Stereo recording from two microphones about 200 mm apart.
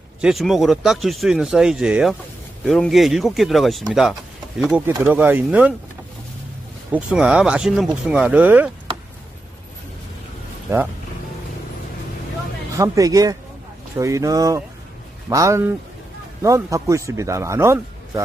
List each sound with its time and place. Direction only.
0.2 s a man's voice: centre (ahead or behind)
6.9 s speech: 5° right (ahead or behind)
10.7 s a man's voice: 15° right (ahead or behind)
12.7 s a man's voice: 15° right (ahead or behind)